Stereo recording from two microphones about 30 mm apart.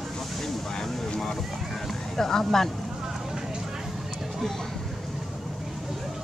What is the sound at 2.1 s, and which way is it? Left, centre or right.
Speech, centre.